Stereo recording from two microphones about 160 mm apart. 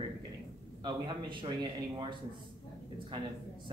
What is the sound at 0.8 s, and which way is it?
Speech, 30° right (ahead or behind).